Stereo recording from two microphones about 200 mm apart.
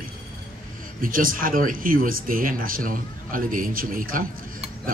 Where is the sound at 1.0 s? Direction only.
45° right (ahead or behind).